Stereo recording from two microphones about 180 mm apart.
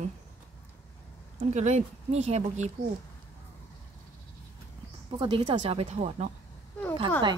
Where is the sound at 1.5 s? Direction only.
40° right (ahead or behind).